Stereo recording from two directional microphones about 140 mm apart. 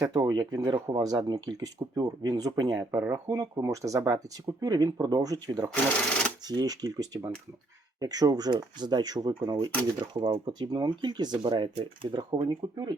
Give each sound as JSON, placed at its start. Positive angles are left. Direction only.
{"t": 0.1, "sound": "speech", "side_deg": -30}
{"t": 5.7, "sound": "speech", "side_deg": 5}
{"t": 6.5, "sound": "speech", "side_deg": -30}